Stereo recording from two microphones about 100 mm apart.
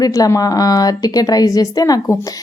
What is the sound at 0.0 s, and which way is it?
A woman's voice, 35° left (ahead or behind).